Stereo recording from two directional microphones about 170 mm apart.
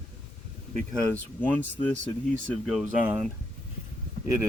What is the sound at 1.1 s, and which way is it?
Speech, 10° left (ahead or behind).